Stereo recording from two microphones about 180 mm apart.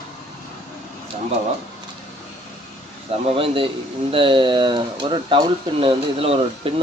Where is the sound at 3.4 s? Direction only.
30° right (ahead or behind).